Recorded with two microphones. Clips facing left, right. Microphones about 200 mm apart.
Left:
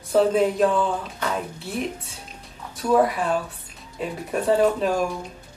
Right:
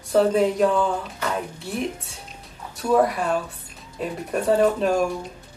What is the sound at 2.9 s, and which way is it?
Speech, centre (ahead or behind).